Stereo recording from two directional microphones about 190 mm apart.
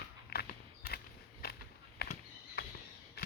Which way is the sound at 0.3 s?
55° left (ahead or behind).